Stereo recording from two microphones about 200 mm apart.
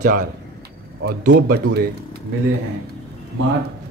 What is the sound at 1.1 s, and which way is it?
Speech, 55° right (ahead or behind).